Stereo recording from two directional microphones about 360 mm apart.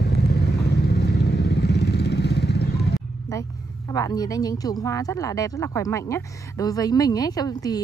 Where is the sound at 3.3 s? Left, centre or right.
Centre.